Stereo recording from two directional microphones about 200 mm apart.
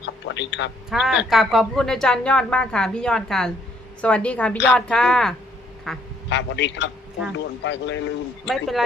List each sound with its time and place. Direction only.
0.0 s a man's voice: 60° left (ahead or behind)
0.9 s a woman's voice: 5° right (ahead or behind)
6.3 s a man's voice: 60° left (ahead or behind)
8.4 s speech: centre (ahead or behind)